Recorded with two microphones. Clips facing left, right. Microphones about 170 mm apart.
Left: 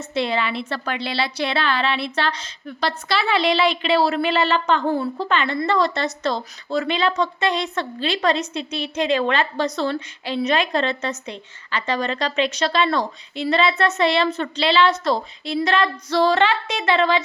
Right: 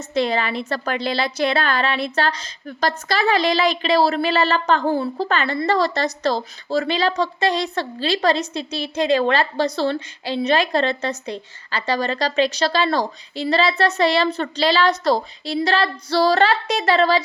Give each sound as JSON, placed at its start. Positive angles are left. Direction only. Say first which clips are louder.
{"t": 0.0, "sound": "a woman's voice", "louder": "right 2 dB", "side_deg": -40}